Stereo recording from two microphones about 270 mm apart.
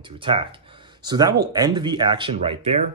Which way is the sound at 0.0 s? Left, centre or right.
Centre.